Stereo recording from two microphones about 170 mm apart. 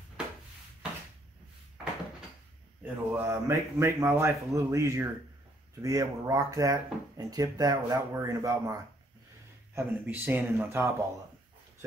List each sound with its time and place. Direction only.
2.8 s speech: 15° right (ahead or behind)
9.8 s speech: 10° right (ahead or behind)